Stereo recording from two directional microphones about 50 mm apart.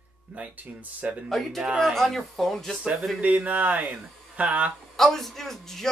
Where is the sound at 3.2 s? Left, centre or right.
Right.